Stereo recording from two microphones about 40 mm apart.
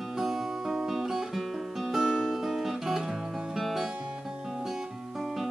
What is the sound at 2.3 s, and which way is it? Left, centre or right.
Guitar, centre.